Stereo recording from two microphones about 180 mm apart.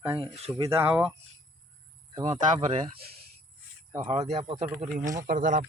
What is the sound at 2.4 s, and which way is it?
Speech, 45° right (ahead or behind).